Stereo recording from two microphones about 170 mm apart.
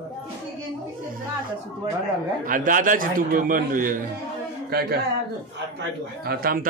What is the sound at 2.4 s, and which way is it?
A man's voice, 55° right (ahead or behind).